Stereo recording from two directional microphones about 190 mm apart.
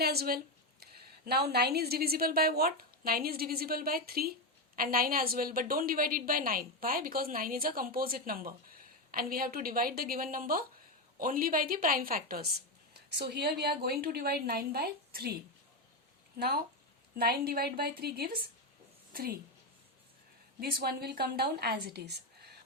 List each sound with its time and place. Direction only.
0.0 s a woman's voice: 55° right (ahead or behind)
17.2 s a woman's voice: 55° right (ahead or behind)
20.6 s speech: 55° right (ahead or behind)